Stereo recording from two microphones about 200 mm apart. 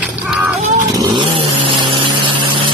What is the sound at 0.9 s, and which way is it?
Vehicle, 20° right (ahead or behind).